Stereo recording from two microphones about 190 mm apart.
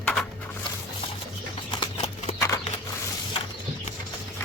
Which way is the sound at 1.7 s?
30° left (ahead or behind).